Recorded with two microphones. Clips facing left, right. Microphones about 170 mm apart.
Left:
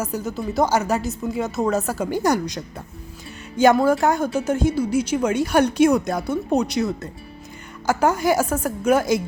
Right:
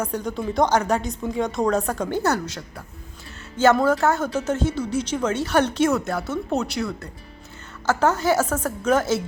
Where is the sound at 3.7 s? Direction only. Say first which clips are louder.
Left 2 dB; 10° left (ahead or behind).